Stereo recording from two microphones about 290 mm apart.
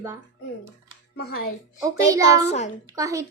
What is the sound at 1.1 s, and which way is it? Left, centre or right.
Speech, left.